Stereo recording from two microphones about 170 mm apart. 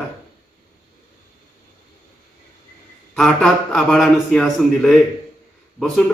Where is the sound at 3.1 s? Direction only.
Centre (ahead or behind).